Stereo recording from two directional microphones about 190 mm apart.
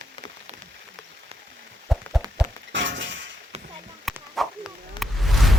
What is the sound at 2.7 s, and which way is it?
Shatter, 70° right (ahead or behind).